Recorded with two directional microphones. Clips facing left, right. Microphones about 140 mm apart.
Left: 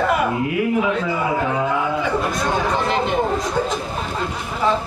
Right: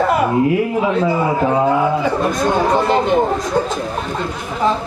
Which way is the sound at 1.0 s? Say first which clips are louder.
Right 5 dB; 35° right (ahead or behind).